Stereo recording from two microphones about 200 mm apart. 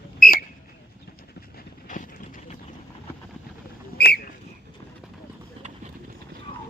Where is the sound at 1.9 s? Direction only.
40° left (ahead or behind).